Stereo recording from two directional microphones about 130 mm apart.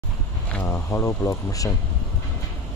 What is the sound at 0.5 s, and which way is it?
Speech, 15° left (ahead or behind).